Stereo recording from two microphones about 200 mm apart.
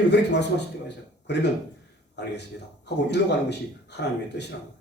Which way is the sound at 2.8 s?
60° left (ahead or behind).